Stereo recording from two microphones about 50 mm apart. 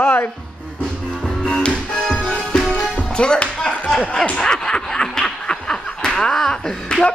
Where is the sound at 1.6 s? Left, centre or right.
Centre.